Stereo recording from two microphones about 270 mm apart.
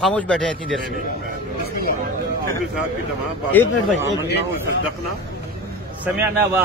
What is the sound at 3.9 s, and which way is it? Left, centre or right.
Speech, left.